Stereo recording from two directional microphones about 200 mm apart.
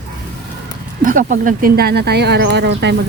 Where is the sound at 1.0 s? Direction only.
40° right (ahead or behind); by 2.9 s 60° right (ahead or behind).